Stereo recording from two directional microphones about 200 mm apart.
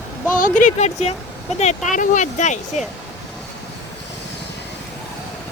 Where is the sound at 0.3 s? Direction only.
40° left (ahead or behind).